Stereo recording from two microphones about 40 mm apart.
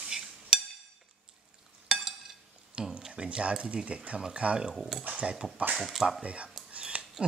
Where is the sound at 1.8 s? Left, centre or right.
Centre.